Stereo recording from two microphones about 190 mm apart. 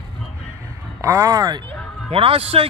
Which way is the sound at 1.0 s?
15° right (ahead or behind).